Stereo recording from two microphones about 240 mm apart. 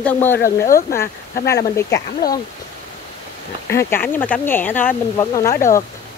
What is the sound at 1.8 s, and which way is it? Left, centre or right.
Speech, centre.